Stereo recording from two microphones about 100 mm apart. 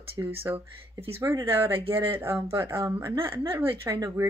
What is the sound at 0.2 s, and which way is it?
A woman's voice, 35° right (ahead or behind).